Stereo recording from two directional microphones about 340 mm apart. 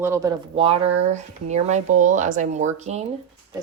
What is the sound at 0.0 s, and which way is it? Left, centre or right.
Speech, centre.